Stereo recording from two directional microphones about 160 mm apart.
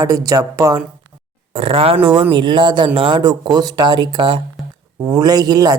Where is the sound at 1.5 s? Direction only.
35° right (ahead or behind).